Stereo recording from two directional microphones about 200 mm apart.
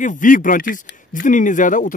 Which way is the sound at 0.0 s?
40° left (ahead or behind).